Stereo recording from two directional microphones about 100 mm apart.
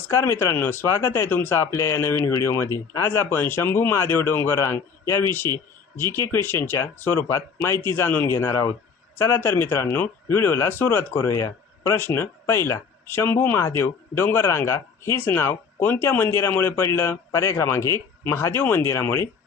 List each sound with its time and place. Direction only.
0.1 s speech: 25° left (ahead or behind)